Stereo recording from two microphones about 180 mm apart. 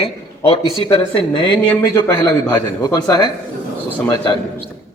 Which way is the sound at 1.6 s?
10° left (ahead or behind).